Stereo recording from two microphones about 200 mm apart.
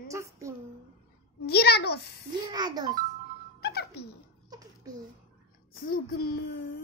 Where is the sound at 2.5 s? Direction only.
20° right (ahead or behind).